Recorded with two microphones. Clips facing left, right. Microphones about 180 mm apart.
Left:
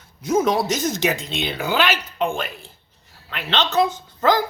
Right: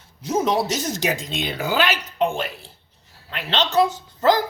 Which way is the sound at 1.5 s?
45° right (ahead or behind).